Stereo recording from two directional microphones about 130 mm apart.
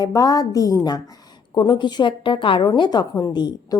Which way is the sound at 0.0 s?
30° left (ahead or behind).